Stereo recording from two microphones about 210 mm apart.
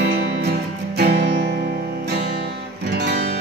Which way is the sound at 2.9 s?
50° right (ahead or behind).